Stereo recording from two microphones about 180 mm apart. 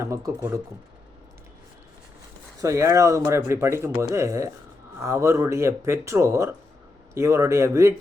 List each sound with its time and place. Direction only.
0.0 s speech: 15° right (ahead or behind)
2.6 s speech: 15° right (ahead or behind)